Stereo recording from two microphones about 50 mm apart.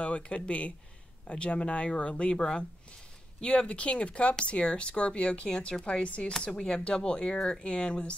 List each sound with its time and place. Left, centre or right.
0.0 s speech: left